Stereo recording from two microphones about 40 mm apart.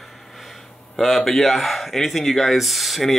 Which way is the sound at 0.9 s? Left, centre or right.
Centre.